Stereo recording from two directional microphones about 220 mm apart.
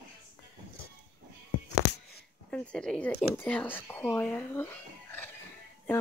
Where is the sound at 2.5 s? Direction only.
5° left (ahead or behind).